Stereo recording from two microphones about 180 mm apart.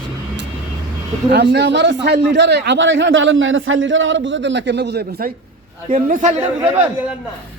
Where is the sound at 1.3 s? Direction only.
70° right (ahead or behind).